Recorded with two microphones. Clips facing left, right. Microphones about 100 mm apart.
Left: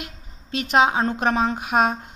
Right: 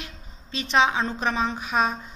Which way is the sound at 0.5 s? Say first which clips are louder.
Left 3 dB; 50° left (ahead or behind).